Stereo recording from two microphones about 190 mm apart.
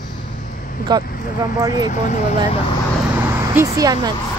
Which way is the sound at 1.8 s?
40° left (ahead or behind).